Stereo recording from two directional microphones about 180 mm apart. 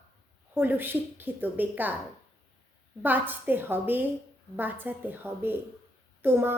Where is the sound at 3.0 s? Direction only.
10° right (ahead or behind).